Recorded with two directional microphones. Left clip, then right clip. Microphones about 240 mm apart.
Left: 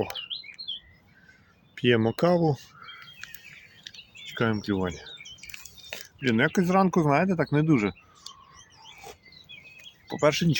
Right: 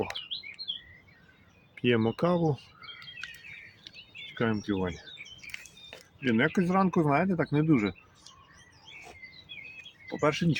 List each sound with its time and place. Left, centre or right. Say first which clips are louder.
0.6 s chirp: left 1 dB; left
1.7 s speech: left 4 dB; left
4.3 s speech: left 3 dB; left
10.1 s speech: left 4 dB; left